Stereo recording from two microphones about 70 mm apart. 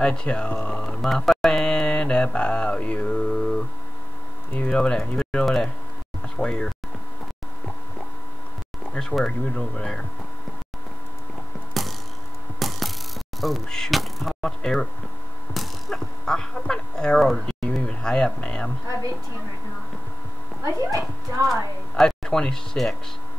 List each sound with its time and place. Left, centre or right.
0.0 s speech: centre
1.0 s mantra: centre
4.6 s speech: centre
6.2 s a sound: centre
8.9 s speech: centre
11.7 s mechanisms: centre
12.5 s a sound: centre
13.4 s speech: centre
20.6 s speech: right
21.9 s speech: centre